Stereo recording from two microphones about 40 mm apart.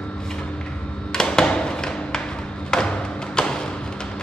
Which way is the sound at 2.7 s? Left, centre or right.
Centre.